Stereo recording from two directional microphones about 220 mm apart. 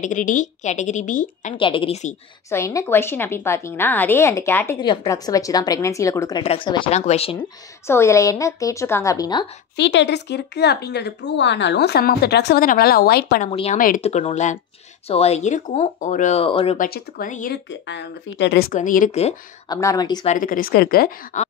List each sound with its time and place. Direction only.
0.0 s speech: 35° left (ahead or behind)
1.6 s a woman's voice: 25° left (ahead or behind)
2.5 s a woman's voice: 15° left (ahead or behind)
7.8 s a woman's voice: 10° left (ahead or behind)
9.8 s speech: 55° left (ahead or behind)
13.5 s a woman's voice: 25° left (ahead or behind)
13.7 s speech: 35° left (ahead or behind)
16.7 s speech: 40° left (ahead or behind)
17.6 s speech: 55° left (ahead or behind)
18.7 s speech: 35° left (ahead or behind)
19.7 s a woman's voice: 15° left (ahead or behind)
20.2 s speech: 40° left (ahead or behind)